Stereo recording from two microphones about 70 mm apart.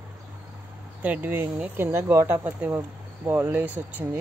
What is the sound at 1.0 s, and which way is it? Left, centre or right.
Speech, right.